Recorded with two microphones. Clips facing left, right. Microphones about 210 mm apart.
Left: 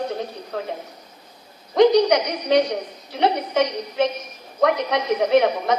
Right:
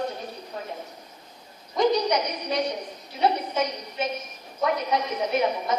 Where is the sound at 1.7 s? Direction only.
75° left (ahead or behind).